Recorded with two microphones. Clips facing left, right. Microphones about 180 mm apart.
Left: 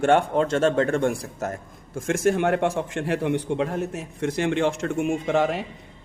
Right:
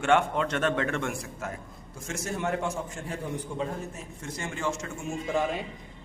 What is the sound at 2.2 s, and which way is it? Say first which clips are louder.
A man's voice: left 9 dB; 85° left.